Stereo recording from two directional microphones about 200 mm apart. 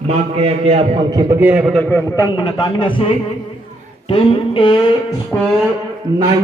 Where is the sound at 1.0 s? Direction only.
20° right (ahead or behind).